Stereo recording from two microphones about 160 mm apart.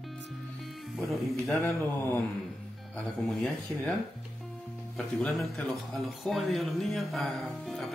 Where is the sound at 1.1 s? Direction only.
Centre (ahead or behind).